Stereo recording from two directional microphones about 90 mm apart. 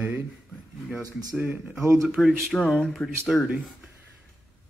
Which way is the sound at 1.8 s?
30° right (ahead or behind).